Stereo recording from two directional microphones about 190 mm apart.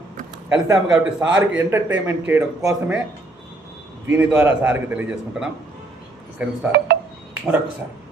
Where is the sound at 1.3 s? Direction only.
75° right (ahead or behind).